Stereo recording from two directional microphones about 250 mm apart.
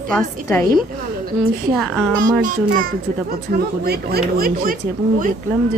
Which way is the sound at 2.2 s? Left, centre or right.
Right.